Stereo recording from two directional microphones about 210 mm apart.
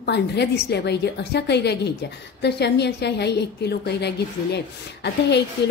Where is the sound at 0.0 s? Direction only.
55° left (ahead or behind).